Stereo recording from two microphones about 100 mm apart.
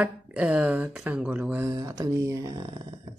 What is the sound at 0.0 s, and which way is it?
Speech, 15° right (ahead or behind).